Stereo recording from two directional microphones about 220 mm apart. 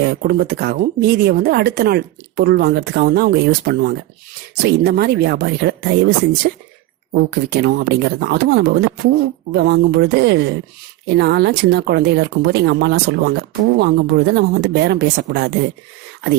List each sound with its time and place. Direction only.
0.0 s speech: 45° right (ahead or behind)